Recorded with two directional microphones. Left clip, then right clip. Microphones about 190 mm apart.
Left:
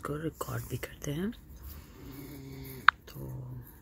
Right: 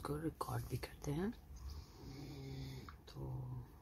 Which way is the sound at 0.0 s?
5° left (ahead or behind).